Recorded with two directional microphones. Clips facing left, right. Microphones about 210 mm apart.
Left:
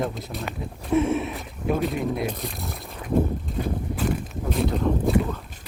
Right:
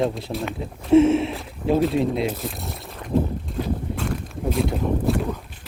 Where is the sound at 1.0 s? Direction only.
25° right (ahead or behind).